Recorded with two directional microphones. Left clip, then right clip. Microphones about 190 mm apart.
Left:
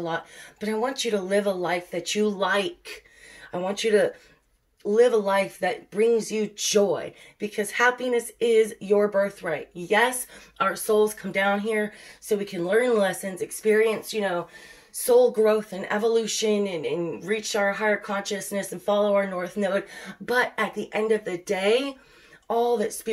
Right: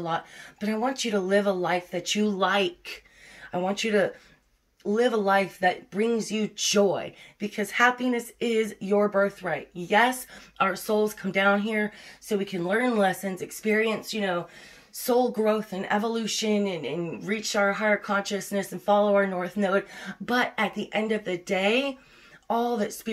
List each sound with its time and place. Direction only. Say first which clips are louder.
0.0 s speech: even; 15° left (ahead or behind)
15.3 s speech: left 4 dB; 15° left (ahead or behind)
16.0 s speech: left 7 dB; 15° right (ahead or behind)
16.3 s speech: left 2 dB; 15° left (ahead or behind)